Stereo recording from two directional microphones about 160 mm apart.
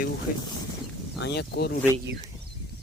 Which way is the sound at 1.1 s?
90° left.